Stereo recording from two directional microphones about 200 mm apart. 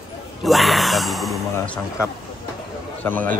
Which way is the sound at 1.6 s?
15° left (ahead or behind).